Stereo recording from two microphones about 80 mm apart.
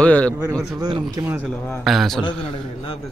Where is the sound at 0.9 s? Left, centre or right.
Right.